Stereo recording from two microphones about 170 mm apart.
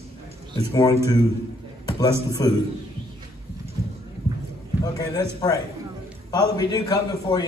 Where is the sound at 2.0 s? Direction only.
20° left (ahead or behind).